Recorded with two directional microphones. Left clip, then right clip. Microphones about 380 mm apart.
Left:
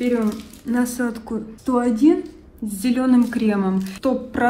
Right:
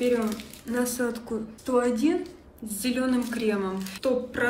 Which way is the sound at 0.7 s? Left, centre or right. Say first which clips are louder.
Left 4 dB; centre.